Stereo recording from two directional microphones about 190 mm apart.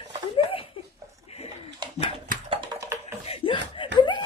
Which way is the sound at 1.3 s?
30° left (ahead or behind).